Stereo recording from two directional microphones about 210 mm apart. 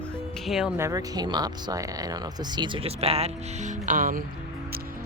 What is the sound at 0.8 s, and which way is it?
Speech, 15° right (ahead or behind).